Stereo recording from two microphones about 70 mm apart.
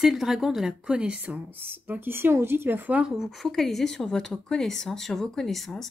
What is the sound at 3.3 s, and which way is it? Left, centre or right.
Speech, centre.